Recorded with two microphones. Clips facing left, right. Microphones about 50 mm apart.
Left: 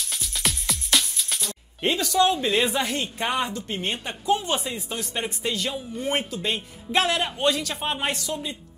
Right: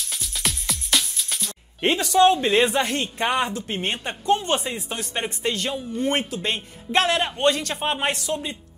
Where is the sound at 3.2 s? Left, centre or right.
Centre.